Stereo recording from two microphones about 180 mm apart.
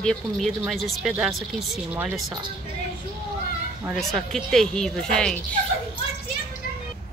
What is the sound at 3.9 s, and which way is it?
Speech, centre (ahead or behind).